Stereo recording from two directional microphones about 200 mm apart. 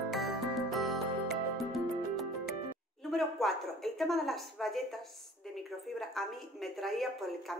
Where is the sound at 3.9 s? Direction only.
Centre (ahead or behind).